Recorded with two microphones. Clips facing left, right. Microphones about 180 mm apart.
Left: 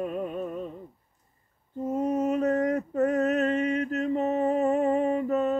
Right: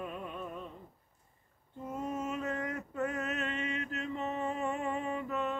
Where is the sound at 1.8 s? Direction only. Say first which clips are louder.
Left 11 dB; 40° left (ahead or behind).